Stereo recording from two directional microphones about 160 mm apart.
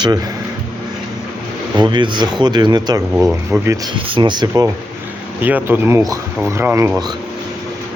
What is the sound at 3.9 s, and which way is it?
Speech, 30° right (ahead or behind).